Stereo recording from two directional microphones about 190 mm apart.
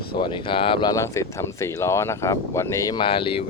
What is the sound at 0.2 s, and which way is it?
Speech, 25° left (ahead or behind).